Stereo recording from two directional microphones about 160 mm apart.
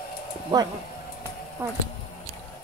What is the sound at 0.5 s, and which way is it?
Speech, 25° right (ahead or behind).